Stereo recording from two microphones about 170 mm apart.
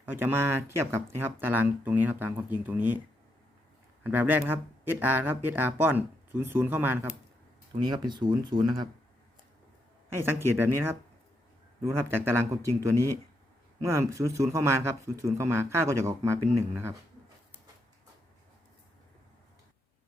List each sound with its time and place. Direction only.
0.0 s speech: 15° right (ahead or behind)
4.0 s speech: 10° right (ahead or behind)
7.8 s speech: 25° right (ahead or behind)
10.1 s speech: 15° right (ahead or behind)